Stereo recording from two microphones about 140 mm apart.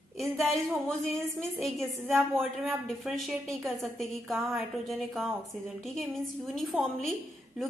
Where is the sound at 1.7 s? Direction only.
15° right (ahead or behind).